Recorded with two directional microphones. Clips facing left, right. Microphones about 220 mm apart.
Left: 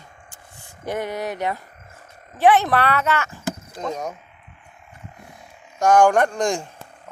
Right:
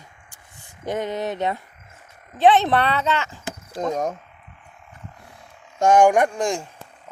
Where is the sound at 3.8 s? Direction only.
40° right (ahead or behind).